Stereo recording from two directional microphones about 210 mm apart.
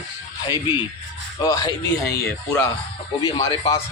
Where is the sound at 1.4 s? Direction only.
20° left (ahead or behind).